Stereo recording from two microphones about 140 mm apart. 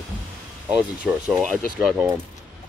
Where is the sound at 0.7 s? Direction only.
10° right (ahead or behind).